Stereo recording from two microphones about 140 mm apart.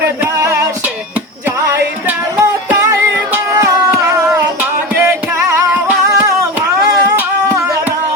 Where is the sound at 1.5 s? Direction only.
20° right (ahead or behind).